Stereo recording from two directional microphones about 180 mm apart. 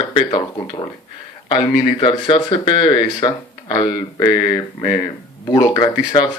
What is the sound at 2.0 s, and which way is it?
Speech, 30° left (ahead or behind).